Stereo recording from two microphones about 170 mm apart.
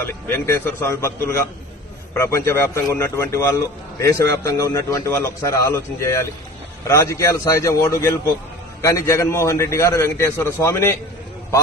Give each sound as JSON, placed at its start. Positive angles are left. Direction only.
{"t": 0.0, "sound": "a man's voice", "side_deg": 15}